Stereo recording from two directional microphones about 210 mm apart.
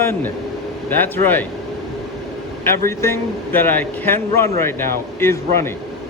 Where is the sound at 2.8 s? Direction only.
10° left (ahead or behind).